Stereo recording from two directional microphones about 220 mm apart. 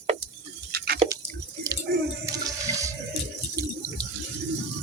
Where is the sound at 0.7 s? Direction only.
45° right (ahead or behind).